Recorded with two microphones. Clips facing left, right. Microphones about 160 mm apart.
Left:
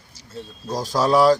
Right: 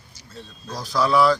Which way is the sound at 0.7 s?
40° left (ahead or behind).